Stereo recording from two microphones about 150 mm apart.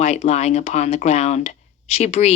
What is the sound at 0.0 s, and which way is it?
Speech, 45° left (ahead or behind).